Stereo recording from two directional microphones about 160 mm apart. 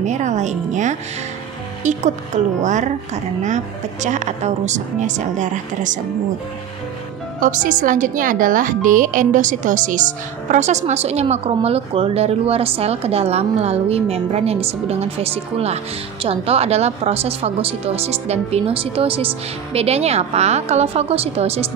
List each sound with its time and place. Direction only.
0.0 s a woman's voice: 50° right (ahead or behind)
7.3 s a woman's voice: 55° right (ahead or behind); by 21.6 s 40° right (ahead or behind)